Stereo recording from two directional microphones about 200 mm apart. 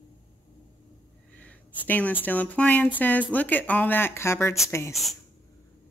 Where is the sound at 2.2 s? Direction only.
5° left (ahead or behind).